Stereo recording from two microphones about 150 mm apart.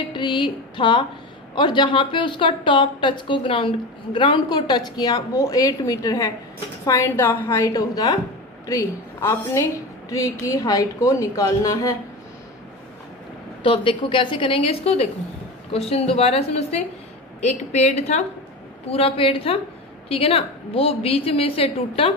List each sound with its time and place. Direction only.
0.1 s speech: 30° left (ahead or behind)
7.1 s a woman's voice: 10° left (ahead or behind)
7.4 s a woman's voice: 25° left (ahead or behind)
13.6 s a woman's voice: 35° left (ahead or behind)